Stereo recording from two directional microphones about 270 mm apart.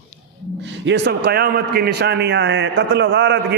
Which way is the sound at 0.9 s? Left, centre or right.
Right.